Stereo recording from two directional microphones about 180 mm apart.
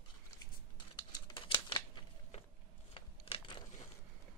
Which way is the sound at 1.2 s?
25° left (ahead or behind).